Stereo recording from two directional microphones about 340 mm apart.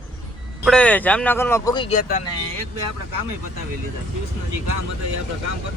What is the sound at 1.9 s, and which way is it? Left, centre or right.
Speech, left.